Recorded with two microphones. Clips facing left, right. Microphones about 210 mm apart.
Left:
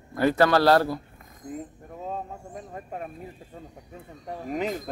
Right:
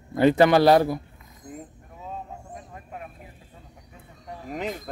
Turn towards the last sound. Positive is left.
turn(degrees=0)  # may be behind; listen again after turning